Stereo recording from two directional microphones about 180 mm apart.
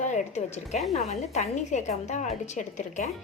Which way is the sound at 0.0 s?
40° left (ahead or behind).